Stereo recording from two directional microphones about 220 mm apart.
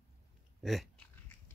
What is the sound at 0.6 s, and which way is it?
Speech, centre (ahead or behind).